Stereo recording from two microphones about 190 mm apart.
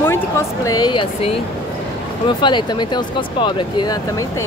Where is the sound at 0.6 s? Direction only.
20° left (ahead or behind).